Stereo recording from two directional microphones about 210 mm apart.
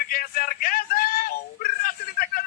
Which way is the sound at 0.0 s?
45° left (ahead or behind).